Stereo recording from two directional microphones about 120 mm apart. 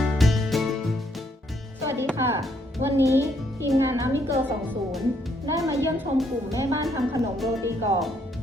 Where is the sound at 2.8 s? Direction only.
20° right (ahead or behind).